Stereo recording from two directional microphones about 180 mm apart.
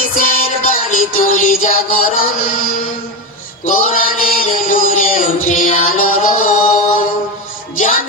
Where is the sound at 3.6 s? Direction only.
45° left (ahead or behind).